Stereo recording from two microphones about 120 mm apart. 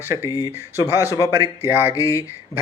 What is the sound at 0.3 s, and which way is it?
Speech, 30° left (ahead or behind).